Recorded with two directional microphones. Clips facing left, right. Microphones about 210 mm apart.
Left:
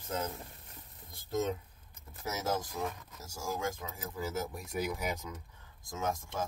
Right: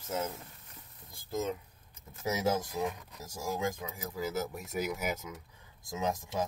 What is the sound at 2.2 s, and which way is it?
Speech, 15° right (ahead or behind).